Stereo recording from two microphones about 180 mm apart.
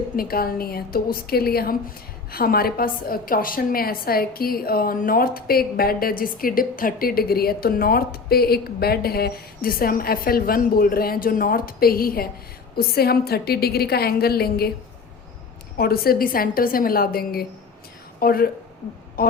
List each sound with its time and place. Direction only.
0.2 s a woman's voice: 55° left (ahead or behind)
15.8 s a woman's voice: 55° left (ahead or behind)